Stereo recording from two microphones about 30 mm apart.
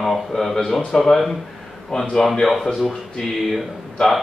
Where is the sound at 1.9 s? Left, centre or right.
Left.